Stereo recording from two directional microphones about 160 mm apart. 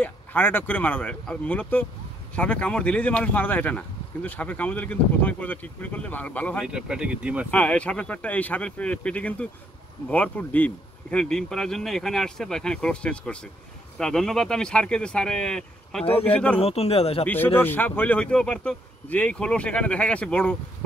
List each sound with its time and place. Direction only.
0.0 s speech: 10° left (ahead or behind)
6.6 s speech: 5° right (ahead or behind)
7.5 s speech: 10° left (ahead or behind)
16.1 s speech: 40° left (ahead or behind)
17.6 s speech: 10° left (ahead or behind)